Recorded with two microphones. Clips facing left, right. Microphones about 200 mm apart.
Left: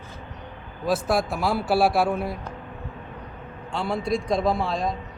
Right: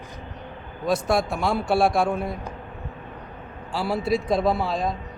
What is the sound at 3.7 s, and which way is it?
A man's voice, 5° right (ahead or behind).